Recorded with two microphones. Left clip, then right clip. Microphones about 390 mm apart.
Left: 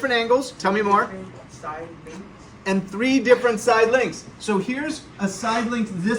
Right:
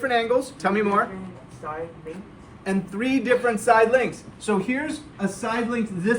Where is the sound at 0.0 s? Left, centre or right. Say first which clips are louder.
Left 2 dB; centre.